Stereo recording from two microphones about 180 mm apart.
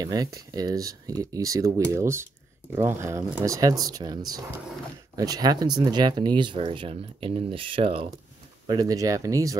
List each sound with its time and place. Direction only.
0.0 s speech: 20° right (ahead or behind)
8.6 s speech: 20° right (ahead or behind)